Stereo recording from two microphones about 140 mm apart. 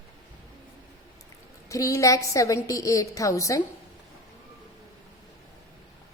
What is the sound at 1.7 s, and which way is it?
A woman's voice, 25° left (ahead or behind).